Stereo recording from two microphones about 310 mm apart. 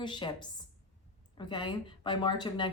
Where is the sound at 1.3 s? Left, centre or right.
Centre.